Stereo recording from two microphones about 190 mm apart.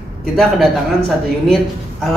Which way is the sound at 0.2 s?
Centre (ahead or behind).